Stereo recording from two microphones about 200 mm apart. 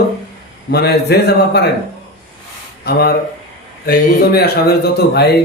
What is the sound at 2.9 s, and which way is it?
A man's voice, 50° left (ahead or behind).